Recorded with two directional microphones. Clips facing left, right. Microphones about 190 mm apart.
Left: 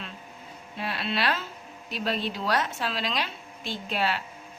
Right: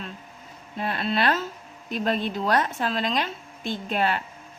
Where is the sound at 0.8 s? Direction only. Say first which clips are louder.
Right 4 dB; 45° right (ahead or behind).